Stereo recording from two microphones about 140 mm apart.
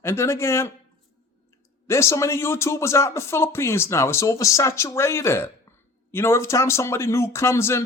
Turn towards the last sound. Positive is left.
turn(degrees=20)  # may be behind; listen again after turning